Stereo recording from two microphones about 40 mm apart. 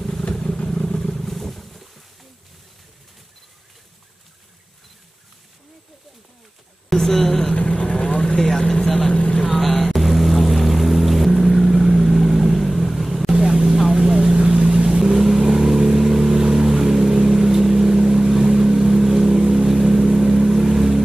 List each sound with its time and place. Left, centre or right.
0.4 s vehicle: centre
1.2 s wild animals: centre
6.9 s a sound: centre
7.2 s vehicle: centre
7.5 s vehicle: left
8.5 s vehicle: centre
9.1 s vehicle: left
9.9 s boat: centre
14.9 s vehicle: centre